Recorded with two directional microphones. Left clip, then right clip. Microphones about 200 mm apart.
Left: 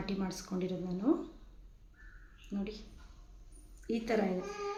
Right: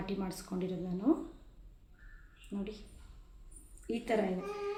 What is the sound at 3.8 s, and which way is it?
Speech, 5° left (ahead or behind).